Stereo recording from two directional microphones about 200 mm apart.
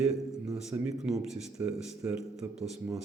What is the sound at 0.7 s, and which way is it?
A man's voice, 5° right (ahead or behind).